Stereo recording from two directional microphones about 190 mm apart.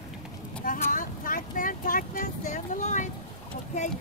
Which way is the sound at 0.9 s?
45° left (ahead or behind).